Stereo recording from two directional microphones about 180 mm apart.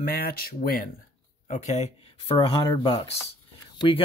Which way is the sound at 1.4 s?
40° left (ahead or behind).